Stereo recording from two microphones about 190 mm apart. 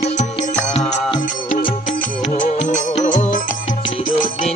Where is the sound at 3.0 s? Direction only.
40° left (ahead or behind).